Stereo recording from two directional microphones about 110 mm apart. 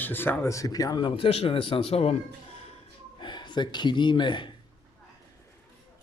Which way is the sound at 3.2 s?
45° left (ahead or behind).